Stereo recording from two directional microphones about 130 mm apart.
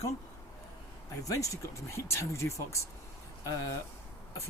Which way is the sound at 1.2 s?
25° left (ahead or behind).